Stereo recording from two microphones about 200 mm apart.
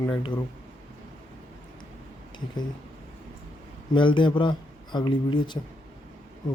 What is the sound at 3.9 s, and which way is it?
Speech, 25° left (ahead or behind).